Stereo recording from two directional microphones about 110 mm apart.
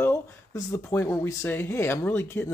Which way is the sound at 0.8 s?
20° left (ahead or behind).